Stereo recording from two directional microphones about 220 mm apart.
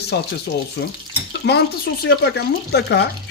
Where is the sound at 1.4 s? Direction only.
50° left (ahead or behind).